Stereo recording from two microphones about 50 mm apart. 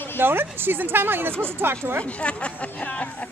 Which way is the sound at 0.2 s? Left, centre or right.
Right.